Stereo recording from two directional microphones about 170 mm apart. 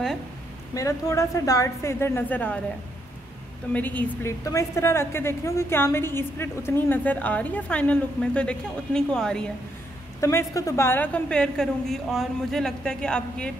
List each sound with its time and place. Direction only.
0.7 s a woman's voice: 20° left (ahead or behind)
3.7 s a woman's voice: 10° left (ahead or behind)
10.2 s a woman's voice: 20° left (ahead or behind)